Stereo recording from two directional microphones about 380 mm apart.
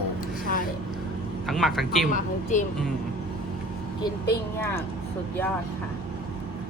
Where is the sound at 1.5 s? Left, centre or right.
Centre.